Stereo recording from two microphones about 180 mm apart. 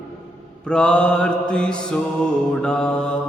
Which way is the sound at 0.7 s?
5° left (ahead or behind).